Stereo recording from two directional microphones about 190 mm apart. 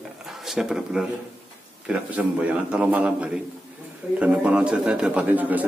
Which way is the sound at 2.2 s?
5° right (ahead or behind).